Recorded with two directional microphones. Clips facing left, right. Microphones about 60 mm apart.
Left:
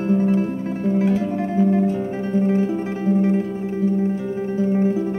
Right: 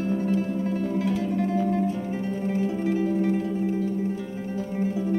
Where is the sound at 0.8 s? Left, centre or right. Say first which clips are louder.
Left 11 dB; left.